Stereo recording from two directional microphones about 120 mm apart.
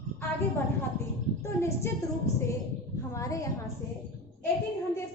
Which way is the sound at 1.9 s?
20° left (ahead or behind).